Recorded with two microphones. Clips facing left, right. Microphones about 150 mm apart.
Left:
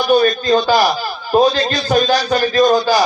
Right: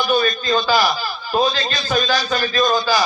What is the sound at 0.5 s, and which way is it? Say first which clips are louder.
Speech: left 4 dB; 60° left (ahead or behind).